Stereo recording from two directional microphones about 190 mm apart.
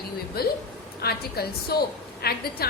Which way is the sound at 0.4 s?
55° left (ahead or behind).